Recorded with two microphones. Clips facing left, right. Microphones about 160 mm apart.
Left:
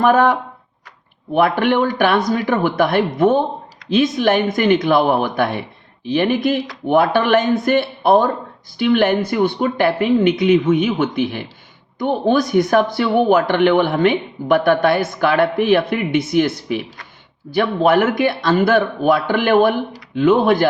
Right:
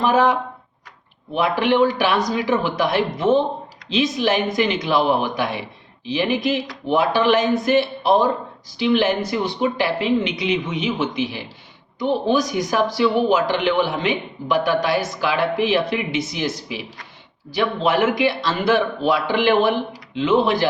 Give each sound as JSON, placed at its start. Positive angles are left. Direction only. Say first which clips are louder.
{"t": 0.0, "sound": "a man's voice", "louder": "left 3 dB", "side_deg": 55}